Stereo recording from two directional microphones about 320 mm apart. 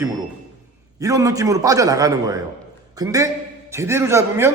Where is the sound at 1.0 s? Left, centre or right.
Centre.